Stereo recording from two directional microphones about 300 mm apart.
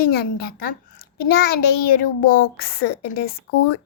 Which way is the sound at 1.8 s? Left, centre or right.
Left.